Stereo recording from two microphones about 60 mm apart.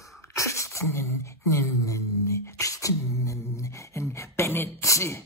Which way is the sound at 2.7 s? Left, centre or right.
Left.